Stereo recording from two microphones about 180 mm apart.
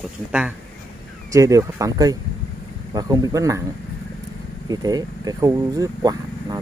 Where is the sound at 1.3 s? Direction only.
15° right (ahead or behind).